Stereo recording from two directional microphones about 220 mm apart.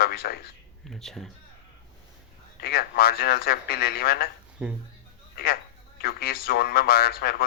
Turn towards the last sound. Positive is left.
turn(degrees=45)  # may be behind; listen again after turning